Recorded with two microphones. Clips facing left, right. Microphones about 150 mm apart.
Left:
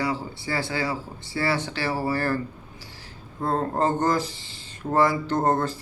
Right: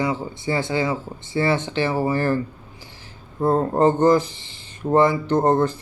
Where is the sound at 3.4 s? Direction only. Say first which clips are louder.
Right 6 dB; 20° right (ahead or behind).